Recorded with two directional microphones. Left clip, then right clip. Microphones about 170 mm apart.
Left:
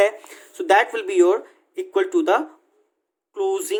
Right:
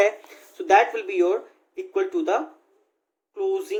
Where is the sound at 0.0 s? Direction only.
40° left (ahead or behind).